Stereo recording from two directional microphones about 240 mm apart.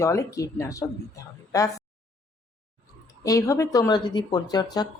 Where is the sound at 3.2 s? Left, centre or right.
Centre.